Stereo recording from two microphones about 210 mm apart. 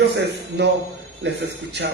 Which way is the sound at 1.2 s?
60° right (ahead or behind).